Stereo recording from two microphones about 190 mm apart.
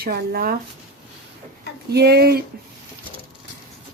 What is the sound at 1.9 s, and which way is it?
Speech, 60° right (ahead or behind).